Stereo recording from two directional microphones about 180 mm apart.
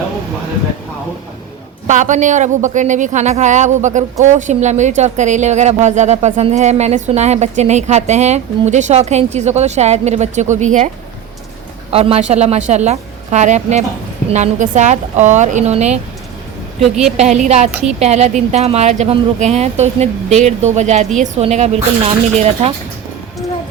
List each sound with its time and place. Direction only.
1.9 s speech: 45° right (ahead or behind)
11.9 s speech: 35° right (ahead or behind)
16.8 s a woman's voice: centre (ahead or behind)
17.2 s speech: 40° right (ahead or behind)
17.7 s a woman's voice: 5° right (ahead or behind)
18.0 s speech: 40° right (ahead or behind)